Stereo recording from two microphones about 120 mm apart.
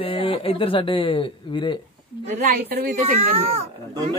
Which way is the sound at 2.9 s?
55° right (ahead or behind).